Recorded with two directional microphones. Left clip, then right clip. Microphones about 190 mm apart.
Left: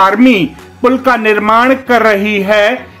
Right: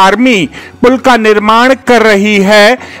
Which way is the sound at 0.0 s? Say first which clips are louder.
Right 2 dB; 50° right (ahead or behind).